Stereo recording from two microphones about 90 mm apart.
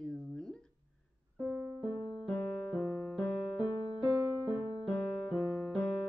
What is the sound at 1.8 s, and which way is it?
Music, 60° left (ahead or behind).